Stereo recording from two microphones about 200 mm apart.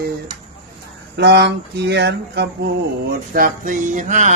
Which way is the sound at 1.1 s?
55° right (ahead or behind).